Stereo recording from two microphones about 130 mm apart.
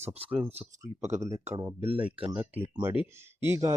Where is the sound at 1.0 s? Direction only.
60° right (ahead or behind).